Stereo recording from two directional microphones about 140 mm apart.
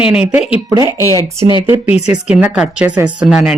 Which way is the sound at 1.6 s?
15° right (ahead or behind).